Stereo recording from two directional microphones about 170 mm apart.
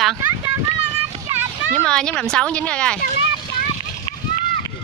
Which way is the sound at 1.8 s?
5° left (ahead or behind).